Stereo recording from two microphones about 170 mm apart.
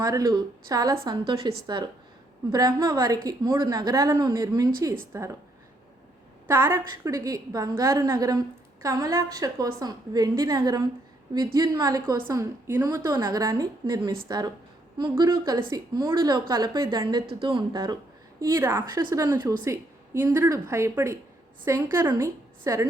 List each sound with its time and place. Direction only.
0.0 s a woman's voice: 20° right (ahead or behind)
6.5 s a woman's voice: 15° right (ahead or behind)